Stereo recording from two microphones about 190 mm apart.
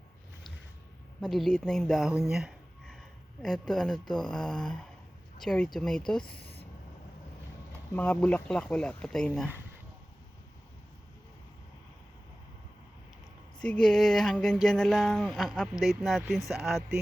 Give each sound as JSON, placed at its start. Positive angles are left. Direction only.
{"t": 1.2, "sound": "speech", "side_deg": 0}
{"t": 2.3, "sound": "a sound", "side_deg": 0}
{"t": 3.4, "sound": "speech", "side_deg": 0}
{"t": 6.3, "sound": "speech", "side_deg": 55}
{"t": 7.9, "sound": "speech", "side_deg": 10}
{"t": 13.6, "sound": "speech", "side_deg": 5}